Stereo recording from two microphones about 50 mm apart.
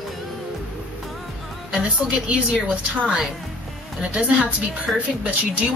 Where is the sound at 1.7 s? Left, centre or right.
Right.